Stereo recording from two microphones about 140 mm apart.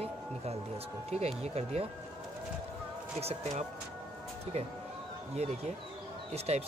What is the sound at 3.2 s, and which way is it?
Speech, 55° right (ahead or behind).